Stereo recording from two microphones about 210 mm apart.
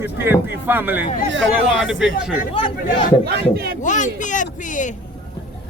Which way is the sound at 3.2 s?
50° right (ahead or behind).